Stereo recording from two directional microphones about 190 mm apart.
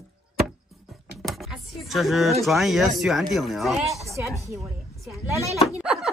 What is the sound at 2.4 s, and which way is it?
Speech, centre (ahead or behind).